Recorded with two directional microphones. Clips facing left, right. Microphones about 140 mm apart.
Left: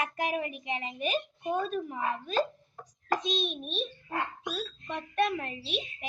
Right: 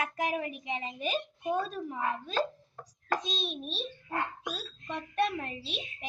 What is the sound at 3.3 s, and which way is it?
Speech, 35° right (ahead or behind).